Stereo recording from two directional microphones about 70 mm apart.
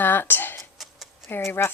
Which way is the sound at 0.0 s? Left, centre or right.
Left.